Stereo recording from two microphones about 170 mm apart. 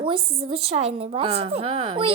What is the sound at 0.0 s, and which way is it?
A woman's voice, 35° right (ahead or behind).